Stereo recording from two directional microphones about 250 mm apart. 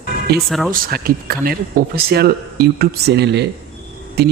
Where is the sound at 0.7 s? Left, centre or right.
Right.